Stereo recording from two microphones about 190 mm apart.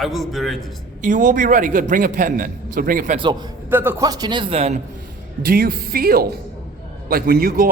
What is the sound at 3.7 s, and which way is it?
A man's voice, 10° right (ahead or behind).